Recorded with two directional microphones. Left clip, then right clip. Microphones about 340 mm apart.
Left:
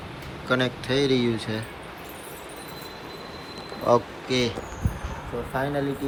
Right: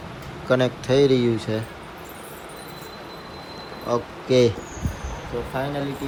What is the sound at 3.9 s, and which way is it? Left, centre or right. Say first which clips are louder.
Speech: left 4 dB; centre.